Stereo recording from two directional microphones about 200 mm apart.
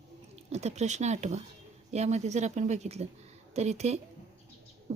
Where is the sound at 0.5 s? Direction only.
35° right (ahead or behind).